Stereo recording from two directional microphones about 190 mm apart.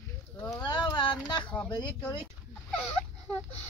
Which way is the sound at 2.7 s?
10° left (ahead or behind).